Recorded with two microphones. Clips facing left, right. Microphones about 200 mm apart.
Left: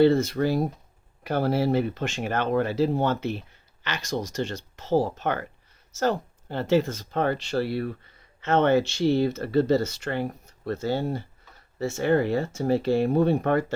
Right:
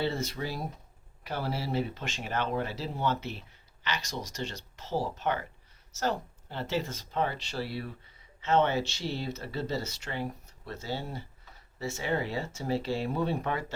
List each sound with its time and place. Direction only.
0.0 s speech: 55° left (ahead or behind)